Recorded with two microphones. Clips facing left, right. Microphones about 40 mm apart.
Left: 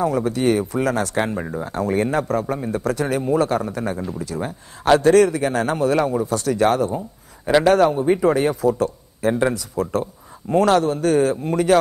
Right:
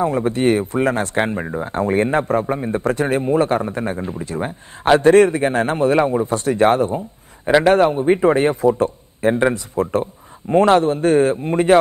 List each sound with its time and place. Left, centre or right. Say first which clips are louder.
0.0 s speech: right 2 dB; right